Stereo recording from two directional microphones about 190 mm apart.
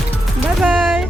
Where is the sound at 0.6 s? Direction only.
5° right (ahead or behind).